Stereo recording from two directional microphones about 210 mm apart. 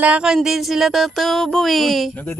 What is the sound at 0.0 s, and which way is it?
A woman's voice, 5° right (ahead or behind).